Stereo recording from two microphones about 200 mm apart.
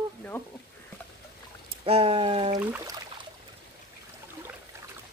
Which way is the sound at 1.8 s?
30° right (ahead or behind).